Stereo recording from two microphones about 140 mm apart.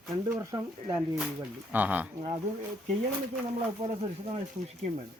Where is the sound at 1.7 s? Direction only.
10° right (ahead or behind).